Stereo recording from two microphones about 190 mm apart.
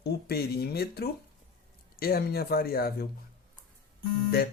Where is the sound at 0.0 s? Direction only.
55° left (ahead or behind).